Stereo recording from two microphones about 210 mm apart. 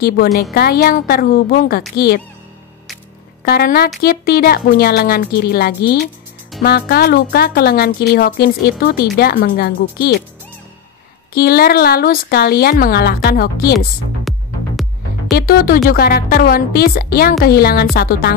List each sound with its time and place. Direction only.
0.0 s a woman's voice: 45° left (ahead or behind)
3.4 s a woman's voice: 45° left (ahead or behind)
11.3 s a woman's voice: 45° left (ahead or behind)
14.3 s music: centre (ahead or behind)
15.3 s a woman's voice: 45° left (ahead or behind)